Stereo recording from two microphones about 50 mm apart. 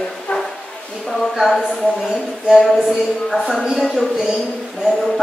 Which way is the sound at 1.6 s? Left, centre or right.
Centre.